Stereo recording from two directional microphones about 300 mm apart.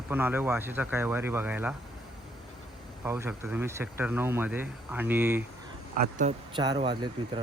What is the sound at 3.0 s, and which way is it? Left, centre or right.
Speech, centre.